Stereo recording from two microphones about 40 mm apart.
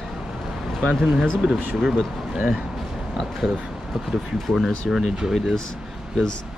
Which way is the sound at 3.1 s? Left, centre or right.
Centre.